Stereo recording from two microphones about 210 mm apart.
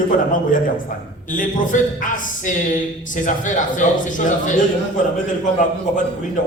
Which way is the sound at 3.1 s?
40° left (ahead or behind).